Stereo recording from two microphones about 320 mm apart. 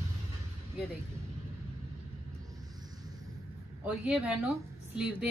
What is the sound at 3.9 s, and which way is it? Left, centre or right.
Speech, centre.